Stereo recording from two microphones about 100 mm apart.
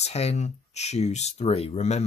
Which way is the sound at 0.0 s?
90° left.